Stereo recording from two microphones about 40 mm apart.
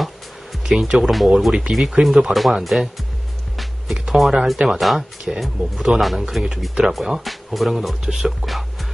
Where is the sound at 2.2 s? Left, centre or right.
Centre.